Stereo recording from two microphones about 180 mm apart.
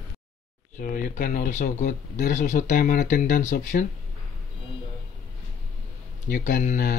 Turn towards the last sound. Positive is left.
turn(degrees=45)  # may be behind; listen again after turning